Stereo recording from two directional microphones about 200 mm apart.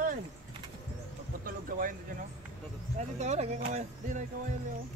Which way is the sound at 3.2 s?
35° right (ahead or behind).